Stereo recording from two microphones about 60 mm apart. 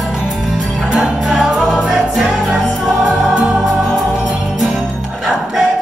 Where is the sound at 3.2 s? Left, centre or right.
Centre.